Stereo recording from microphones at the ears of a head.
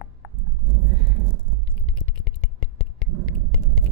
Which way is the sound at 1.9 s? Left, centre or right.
Left.